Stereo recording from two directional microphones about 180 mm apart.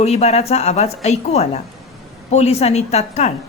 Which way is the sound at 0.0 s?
35° left (ahead or behind).